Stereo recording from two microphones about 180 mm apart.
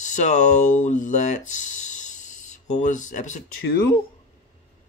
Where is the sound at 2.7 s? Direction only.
45° left (ahead or behind).